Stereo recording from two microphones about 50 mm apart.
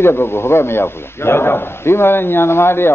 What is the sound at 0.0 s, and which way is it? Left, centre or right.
A man's voice, left.